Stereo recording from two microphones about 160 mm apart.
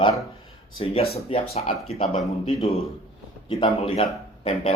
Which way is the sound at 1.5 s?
40° left (ahead or behind).